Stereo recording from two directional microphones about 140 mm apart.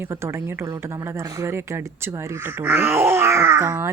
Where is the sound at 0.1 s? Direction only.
20° right (ahead or behind).